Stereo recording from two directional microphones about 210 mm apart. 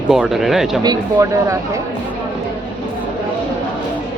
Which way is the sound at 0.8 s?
20° right (ahead or behind).